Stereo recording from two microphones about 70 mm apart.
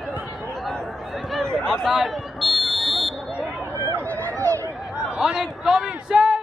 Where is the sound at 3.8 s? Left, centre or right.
Right.